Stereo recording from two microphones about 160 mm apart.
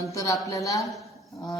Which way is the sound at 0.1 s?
20° left (ahead or behind).